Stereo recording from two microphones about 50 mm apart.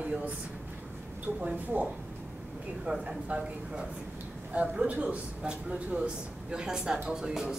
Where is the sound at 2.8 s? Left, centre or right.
Centre.